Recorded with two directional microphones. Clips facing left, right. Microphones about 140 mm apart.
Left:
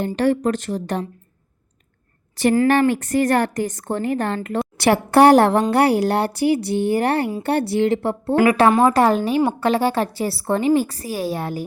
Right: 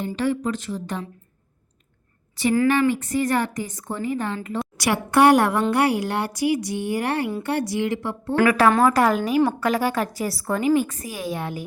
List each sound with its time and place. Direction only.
0.2 s a woman's voice: 70° left (ahead or behind)
2.6 s a woman's voice: 65° left (ahead or behind)
4.8 s a woman's voice: 35° left (ahead or behind)